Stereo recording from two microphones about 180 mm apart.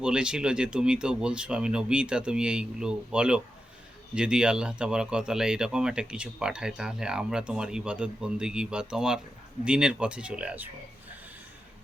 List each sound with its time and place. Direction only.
0.0 s speech: 5° right (ahead or behind)